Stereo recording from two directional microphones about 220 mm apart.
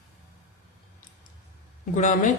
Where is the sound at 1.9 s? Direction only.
35° left (ahead or behind).